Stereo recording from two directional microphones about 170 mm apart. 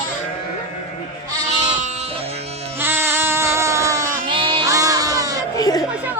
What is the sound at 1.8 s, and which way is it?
Music, 40° right (ahead or behind).